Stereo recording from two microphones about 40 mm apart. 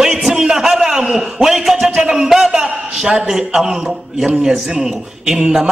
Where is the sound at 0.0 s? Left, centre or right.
Centre.